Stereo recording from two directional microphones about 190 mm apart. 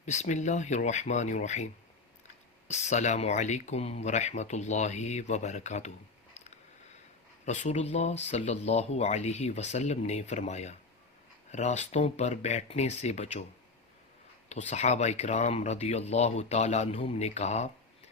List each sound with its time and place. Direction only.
0.0 s speech: 35° left (ahead or behind)
7.4 s speech: 35° left (ahead or behind)
14.5 s speech: 35° left (ahead or behind)